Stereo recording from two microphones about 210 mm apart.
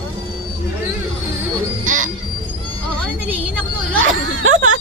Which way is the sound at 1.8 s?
40° right (ahead or behind).